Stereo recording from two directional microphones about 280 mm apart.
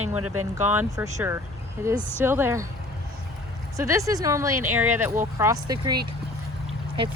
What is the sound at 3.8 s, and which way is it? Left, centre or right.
Speech, centre.